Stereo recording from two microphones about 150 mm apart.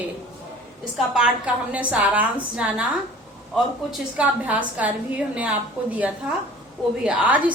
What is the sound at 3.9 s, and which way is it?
A woman's voice, 10° right (ahead or behind).